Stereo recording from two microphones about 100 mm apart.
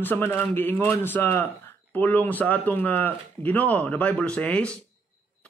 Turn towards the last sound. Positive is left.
turn(degrees=10)  # may be behind; listen again after turning